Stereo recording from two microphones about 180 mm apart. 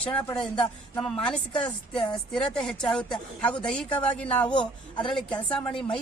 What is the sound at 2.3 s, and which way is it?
A woman's voice, 5° left (ahead or behind).